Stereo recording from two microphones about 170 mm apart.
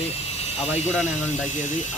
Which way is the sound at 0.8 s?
40° left (ahead or behind).